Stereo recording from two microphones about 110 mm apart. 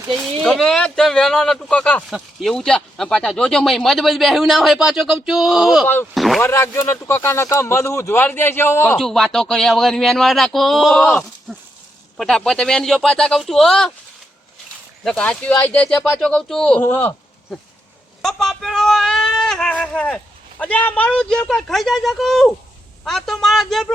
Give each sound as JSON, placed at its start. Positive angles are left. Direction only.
{"t": 0.4, "sound": "speech", "side_deg": 5}
{"t": 2.0, "sound": "speech", "side_deg": 0}
{"t": 5.8, "sound": "speech", "side_deg": 20}
{"t": 6.1, "sound": "speech", "side_deg": 0}
{"t": 6.4, "sound": "speech", "side_deg": 25}
{"t": 9.0, "sound": "speech", "side_deg": 0}
{"t": 11.0, "sound": "speech", "side_deg": 15}
{"t": 11.5, "sound": "a sound", "side_deg": 0}
{"t": 12.1, "sound": "speech", "side_deg": 5}
{"t": 15.0, "sound": "speech", "side_deg": 5}
{"t": 16.2, "sound": "speech", "side_deg": 5}
{"t": 16.8, "sound": "speech", "side_deg": 20}
{"t": 18.2, "sound": "speech", "side_deg": 5}